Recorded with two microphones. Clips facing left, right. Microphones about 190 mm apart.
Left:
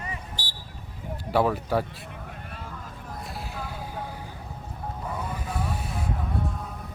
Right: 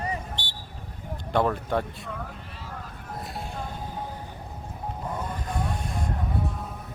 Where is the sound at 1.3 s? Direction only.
5° left (ahead or behind).